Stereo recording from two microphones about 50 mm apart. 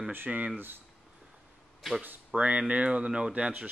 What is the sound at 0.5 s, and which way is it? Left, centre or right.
Speech, right.